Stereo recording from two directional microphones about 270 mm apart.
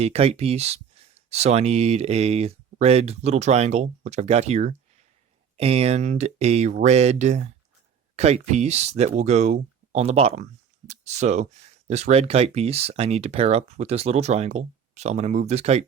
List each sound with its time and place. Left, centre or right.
0.0 s speech: right